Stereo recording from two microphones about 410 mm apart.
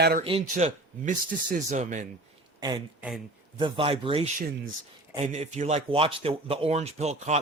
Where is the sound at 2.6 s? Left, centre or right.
Centre.